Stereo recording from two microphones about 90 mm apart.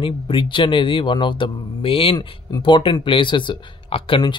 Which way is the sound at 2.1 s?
55° left (ahead or behind).